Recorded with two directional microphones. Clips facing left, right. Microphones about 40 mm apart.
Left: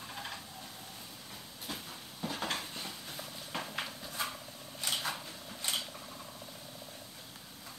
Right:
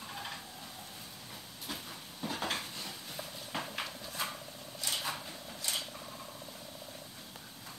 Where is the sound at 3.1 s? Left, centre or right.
Centre.